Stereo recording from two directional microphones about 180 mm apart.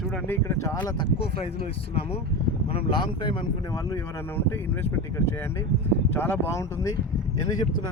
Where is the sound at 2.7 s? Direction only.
25° left (ahead or behind).